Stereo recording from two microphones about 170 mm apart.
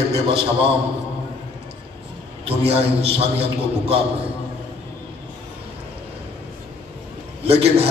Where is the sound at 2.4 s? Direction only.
35° right (ahead or behind).